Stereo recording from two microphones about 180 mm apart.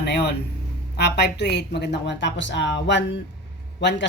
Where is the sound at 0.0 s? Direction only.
65° left (ahead or behind).